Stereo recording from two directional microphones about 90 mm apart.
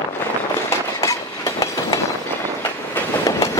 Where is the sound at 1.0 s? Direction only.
35° left (ahead or behind).